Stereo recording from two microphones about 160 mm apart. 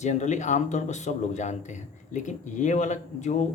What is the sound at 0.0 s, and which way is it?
Speech, 50° left (ahead or behind).